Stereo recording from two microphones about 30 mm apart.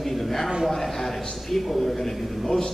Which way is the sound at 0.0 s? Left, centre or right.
Centre.